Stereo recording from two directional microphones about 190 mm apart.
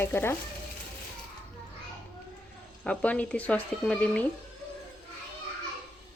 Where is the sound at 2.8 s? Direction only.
5° left (ahead or behind).